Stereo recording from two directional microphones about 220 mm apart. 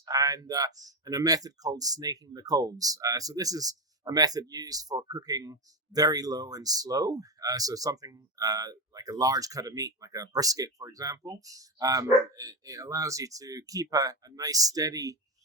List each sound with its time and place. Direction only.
0.0 s speech: 15° right (ahead or behind)